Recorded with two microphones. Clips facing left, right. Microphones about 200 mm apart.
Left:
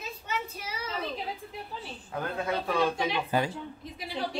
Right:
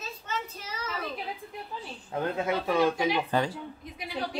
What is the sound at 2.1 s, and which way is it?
Speech, 25° right (ahead or behind).